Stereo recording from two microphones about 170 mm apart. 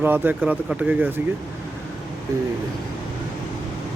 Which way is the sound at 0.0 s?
10° right (ahead or behind).